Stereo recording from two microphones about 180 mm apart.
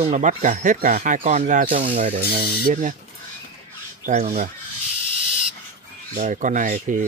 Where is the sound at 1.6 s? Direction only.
30° right (ahead or behind).